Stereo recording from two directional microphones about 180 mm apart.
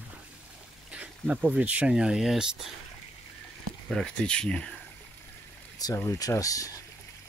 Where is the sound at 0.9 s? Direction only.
5° right (ahead or behind).